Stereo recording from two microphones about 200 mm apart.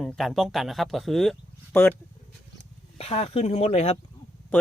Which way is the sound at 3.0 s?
30° left (ahead or behind).